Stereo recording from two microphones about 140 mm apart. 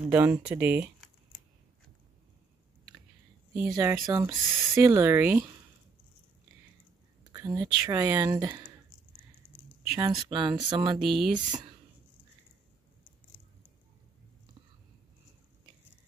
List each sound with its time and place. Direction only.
0.0 s speech: 15° right (ahead or behind)
3.6 s speech: 25° right (ahead or behind)
7.3 s speech: 25° right (ahead or behind)
9.9 s speech: 30° right (ahead or behind)
11.0 s speech: centre (ahead or behind)